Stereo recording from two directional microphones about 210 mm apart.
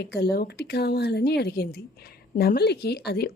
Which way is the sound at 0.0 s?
50° left (ahead or behind).